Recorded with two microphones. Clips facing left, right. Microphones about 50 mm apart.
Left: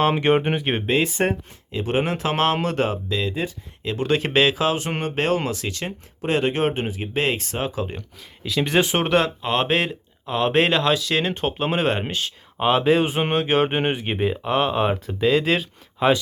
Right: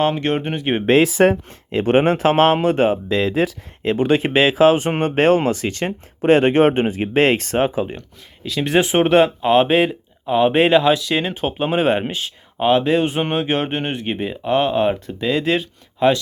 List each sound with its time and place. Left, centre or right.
0.0 s speech: centre
1.5 s speech: right
2.3 s speech: right
3.1 s speech: right
3.9 s speech: right
4.5 s speech: right
8.4 s speech: centre